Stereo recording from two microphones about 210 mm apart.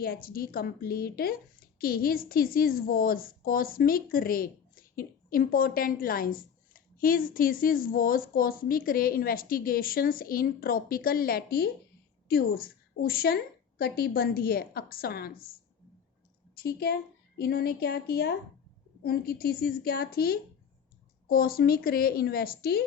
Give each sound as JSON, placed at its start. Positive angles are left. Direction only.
{"t": 0.0, "sound": "a woman's voice", "side_deg": 45}
{"t": 16.6, "sound": "a woman's voice", "side_deg": 50}